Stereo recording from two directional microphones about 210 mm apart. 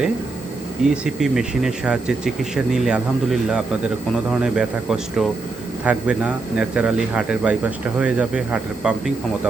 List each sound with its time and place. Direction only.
0.9 s speech: centre (ahead or behind)